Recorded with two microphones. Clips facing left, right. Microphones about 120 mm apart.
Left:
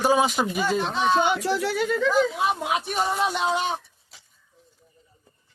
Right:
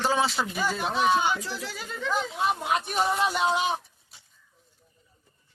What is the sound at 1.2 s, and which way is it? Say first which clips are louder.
Speech: left 6 dB; 65° left (ahead or behind).